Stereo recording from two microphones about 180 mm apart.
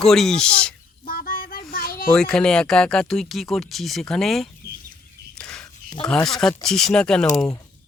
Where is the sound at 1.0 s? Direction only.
55° left (ahead or behind).